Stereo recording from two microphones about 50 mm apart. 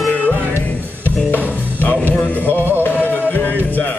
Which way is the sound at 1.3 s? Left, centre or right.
Left.